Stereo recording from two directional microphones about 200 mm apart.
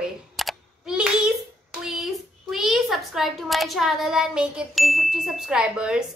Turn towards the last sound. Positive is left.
turn(degrees=-5)  # may be behind; listen again after turning